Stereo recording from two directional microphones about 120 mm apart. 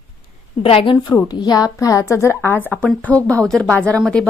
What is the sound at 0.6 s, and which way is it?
Speech, 50° left (ahead or behind).